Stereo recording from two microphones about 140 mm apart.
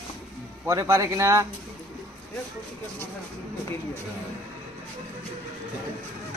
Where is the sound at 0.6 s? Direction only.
25° right (ahead or behind).